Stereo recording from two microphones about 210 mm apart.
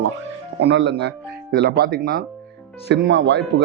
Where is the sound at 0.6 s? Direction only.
55° right (ahead or behind).